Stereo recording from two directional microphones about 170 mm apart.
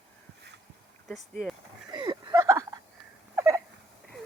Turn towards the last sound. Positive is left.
turn(degrees=-15)  # may be behind; listen again after turning